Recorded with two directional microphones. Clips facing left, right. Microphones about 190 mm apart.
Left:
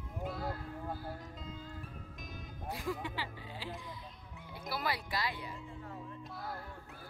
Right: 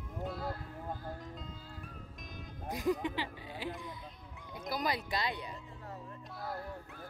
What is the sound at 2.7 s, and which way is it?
Music, 20° right (ahead or behind).